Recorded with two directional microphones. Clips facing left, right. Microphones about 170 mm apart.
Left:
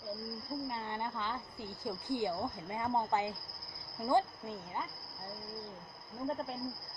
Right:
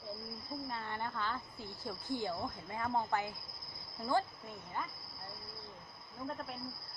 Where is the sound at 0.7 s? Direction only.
20° left (ahead or behind).